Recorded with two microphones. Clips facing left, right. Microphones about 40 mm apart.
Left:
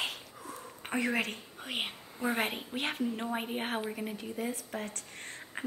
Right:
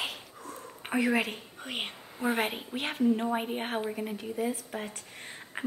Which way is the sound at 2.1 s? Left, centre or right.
Right.